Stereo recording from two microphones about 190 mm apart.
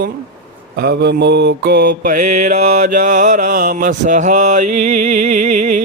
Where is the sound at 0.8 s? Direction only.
60° right (ahead or behind).